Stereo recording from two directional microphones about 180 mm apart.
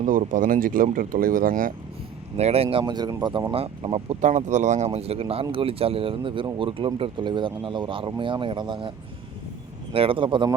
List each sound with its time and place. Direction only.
0.0 s speech: 45° right (ahead or behind)
2.3 s speech: 35° right (ahead or behind)
3.5 s speech: 30° right (ahead or behind)
9.9 s speech: 30° right (ahead or behind)